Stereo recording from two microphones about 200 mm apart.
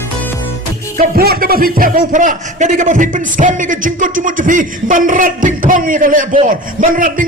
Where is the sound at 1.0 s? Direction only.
50° right (ahead or behind).